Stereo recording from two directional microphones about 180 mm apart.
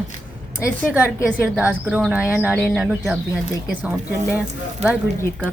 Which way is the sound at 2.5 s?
5° left (ahead or behind).